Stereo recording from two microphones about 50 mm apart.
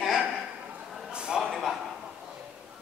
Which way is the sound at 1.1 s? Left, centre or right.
Centre.